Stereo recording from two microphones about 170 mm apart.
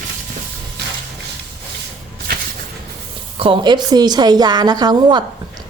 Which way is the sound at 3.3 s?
30° right (ahead or behind).